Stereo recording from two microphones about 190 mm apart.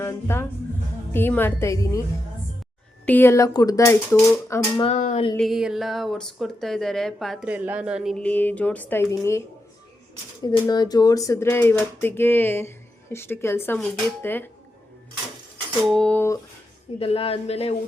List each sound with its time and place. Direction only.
0.0 s speech: 15° left (ahead or behind)
3.1 s speech: 10° left (ahead or behind)
4.8 s a man's voice: 35° left (ahead or behind)
5.4 s speech: centre (ahead or behind); by 9.4 s 15° left (ahead or behind)
10.4 s speech: 20° left (ahead or behind)
15.9 s speech: 5° left (ahead or behind)
17.0 s a man's voice: 30° left (ahead or behind)